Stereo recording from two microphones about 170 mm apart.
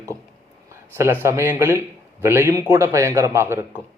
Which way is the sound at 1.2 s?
15° right (ahead or behind).